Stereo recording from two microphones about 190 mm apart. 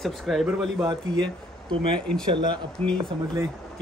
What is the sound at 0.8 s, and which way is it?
Speech, 25° right (ahead or behind).